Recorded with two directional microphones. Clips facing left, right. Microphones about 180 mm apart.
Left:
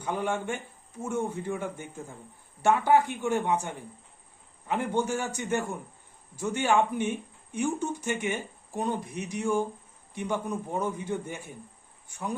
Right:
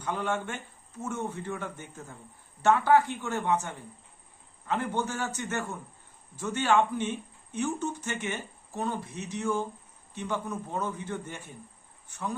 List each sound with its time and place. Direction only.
0.0 s speech: 10° left (ahead or behind)